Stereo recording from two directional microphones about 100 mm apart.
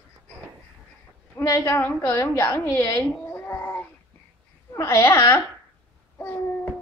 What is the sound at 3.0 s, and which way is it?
Cat, 15° left (ahead or behind).